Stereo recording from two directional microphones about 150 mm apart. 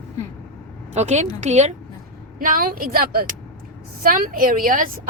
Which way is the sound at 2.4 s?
70° right (ahead or behind).